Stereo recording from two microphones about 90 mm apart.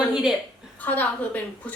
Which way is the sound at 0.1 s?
5° right (ahead or behind).